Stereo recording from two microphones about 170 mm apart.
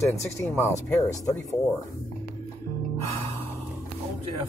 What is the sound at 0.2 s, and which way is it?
Speech, 15° left (ahead or behind).